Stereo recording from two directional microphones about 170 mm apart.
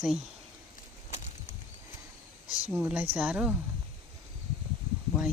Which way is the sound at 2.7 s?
5° right (ahead or behind).